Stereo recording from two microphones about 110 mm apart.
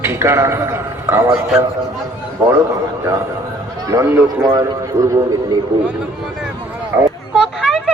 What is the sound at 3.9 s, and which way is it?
Speech, 25° right (ahead or behind).